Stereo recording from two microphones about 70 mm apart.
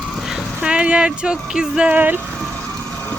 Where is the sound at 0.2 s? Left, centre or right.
Centre.